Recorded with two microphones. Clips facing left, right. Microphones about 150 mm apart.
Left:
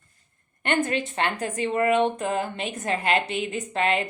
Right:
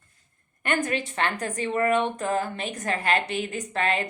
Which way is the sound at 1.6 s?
25° left (ahead or behind).